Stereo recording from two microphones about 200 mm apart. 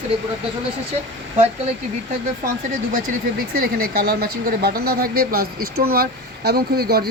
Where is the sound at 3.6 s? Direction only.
50° right (ahead or behind).